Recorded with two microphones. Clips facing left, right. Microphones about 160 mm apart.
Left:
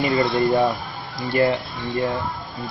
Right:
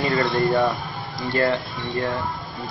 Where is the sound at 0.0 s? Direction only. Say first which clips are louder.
Left 2 dB; 15° left (ahead or behind).